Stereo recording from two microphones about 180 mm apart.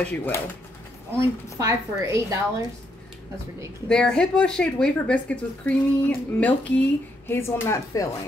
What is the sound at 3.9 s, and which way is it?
A woman's voice, 5° left (ahead or behind).